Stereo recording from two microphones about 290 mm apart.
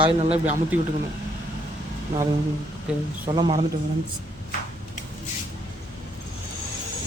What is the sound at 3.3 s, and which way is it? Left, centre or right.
Speech, centre.